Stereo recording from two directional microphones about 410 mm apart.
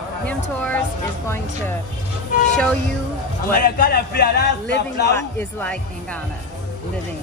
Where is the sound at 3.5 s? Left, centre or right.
Left.